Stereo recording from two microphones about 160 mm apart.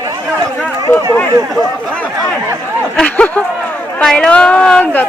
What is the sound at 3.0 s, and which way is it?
A woman's voice, 10° left (ahead or behind).